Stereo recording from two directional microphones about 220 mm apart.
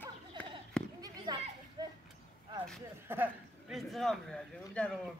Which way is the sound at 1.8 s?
20° right (ahead or behind).